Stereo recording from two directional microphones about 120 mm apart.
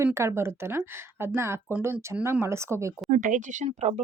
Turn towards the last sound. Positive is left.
turn(degrees=-70)  # may be behind; listen again after turning